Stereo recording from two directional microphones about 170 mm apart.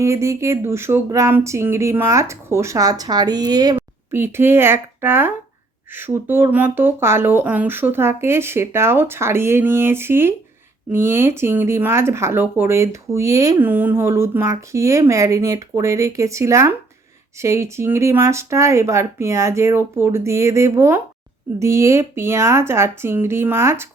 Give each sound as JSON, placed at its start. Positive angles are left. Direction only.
{"t": 0.0, "sound": "speech", "side_deg": -15}